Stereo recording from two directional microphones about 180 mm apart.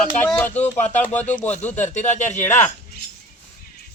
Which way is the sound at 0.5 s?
40° left (ahead or behind).